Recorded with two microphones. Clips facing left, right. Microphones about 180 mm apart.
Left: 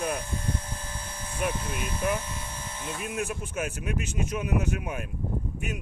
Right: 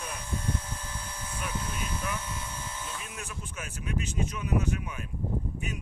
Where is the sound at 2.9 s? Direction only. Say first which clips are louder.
Left 9 dB; 55° left (ahead or behind).